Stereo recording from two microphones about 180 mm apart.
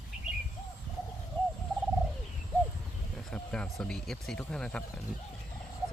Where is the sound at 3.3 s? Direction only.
5° left (ahead or behind).